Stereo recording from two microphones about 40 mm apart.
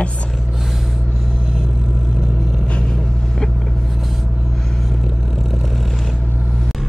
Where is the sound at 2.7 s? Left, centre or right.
Left.